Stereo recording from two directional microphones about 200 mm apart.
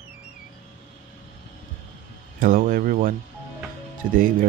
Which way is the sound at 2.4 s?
45° right (ahead or behind).